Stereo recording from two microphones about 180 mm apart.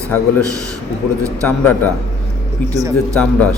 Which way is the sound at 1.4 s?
10° left (ahead or behind).